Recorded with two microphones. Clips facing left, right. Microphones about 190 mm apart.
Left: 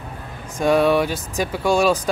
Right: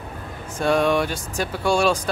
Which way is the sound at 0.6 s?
10° left (ahead or behind).